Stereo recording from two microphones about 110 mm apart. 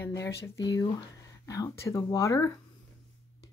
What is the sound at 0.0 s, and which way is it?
Speech, 25° left (ahead or behind).